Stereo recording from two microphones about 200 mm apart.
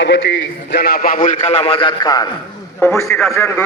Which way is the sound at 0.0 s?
60° left (ahead or behind).